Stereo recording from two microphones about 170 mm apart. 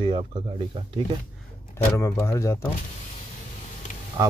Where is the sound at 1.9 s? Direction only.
15° left (ahead or behind).